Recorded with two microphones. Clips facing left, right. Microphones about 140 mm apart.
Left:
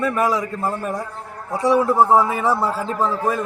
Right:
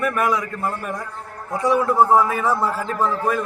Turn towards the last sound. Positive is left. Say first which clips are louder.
# even
turn(degrees=30)  # may be behind; listen again after turning